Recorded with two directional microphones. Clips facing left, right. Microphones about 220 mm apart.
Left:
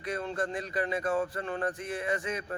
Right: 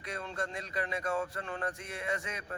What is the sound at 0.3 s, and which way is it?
Speech, 5° left (ahead or behind).